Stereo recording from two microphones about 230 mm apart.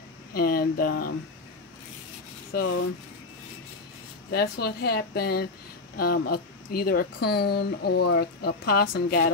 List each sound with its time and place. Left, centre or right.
0.3 s speech: left
2.5 s speech: left
4.3 s speech: left